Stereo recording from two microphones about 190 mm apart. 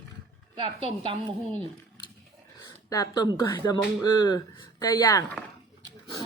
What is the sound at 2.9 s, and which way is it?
Speech, 20° left (ahead or behind).